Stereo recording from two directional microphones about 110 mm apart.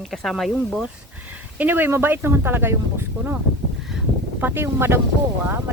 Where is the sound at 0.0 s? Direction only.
Centre (ahead or behind).